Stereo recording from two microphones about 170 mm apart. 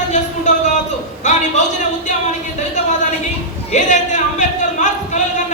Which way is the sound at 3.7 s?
45° left (ahead or behind).